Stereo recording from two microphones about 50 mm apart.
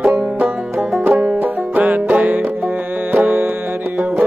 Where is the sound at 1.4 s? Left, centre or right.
Right.